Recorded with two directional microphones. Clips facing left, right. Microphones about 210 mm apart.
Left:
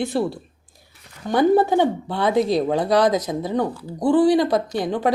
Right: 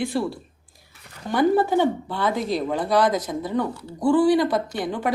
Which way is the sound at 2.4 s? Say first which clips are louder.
Left 4 dB; 40° left (ahead or behind).